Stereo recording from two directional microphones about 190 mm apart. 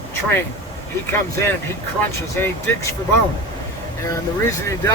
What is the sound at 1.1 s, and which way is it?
Speech, 10° left (ahead or behind).